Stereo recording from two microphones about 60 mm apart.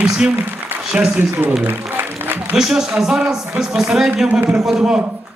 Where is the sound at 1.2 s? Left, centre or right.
Right.